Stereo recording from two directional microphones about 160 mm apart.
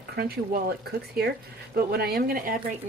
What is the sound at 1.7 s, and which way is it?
Speech, 80° right.